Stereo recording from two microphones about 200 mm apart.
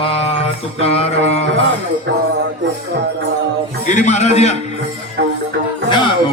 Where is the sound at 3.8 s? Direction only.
35° left (ahead or behind).